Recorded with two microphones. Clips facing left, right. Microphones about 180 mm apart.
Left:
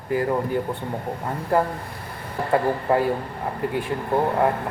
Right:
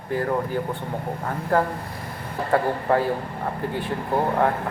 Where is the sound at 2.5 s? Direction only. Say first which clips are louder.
Left 1 dB; 5° left (ahead or behind).